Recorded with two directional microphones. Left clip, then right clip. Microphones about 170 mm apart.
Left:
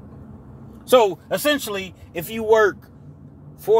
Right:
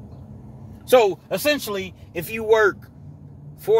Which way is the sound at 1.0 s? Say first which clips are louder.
Even; 15° left (ahead or behind).